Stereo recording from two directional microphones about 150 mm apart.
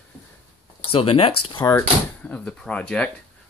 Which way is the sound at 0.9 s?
40° left (ahead or behind).